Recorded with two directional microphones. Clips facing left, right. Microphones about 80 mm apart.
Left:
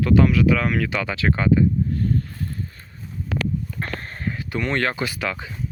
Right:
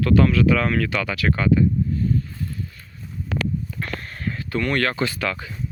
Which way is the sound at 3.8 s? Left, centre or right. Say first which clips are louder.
Left 1 dB; left.